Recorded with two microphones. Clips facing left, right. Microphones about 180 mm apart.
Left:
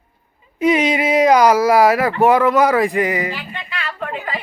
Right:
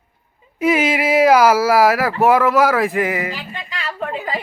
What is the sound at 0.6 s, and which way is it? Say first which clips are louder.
Speech: left 1 dB; 5° right (ahead or behind).